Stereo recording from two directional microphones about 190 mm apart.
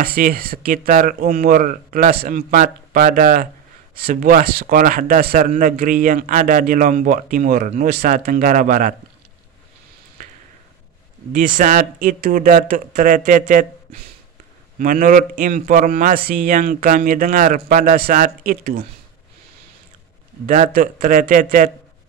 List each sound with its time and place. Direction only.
0.0 s a man's voice: 50° right (ahead or behind)
11.3 s a man's voice: 45° right (ahead or behind)
14.8 s a man's voice: 45° right (ahead or behind)
20.4 s a man's voice: 45° right (ahead or behind)